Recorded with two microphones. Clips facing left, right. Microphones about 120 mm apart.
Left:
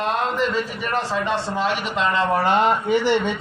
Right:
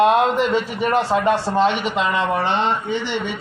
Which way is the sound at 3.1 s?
15° right (ahead or behind).